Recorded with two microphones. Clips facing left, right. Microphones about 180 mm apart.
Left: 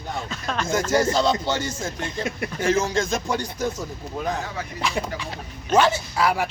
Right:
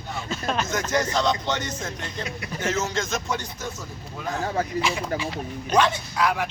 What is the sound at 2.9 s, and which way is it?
Speech, 30° left (ahead or behind).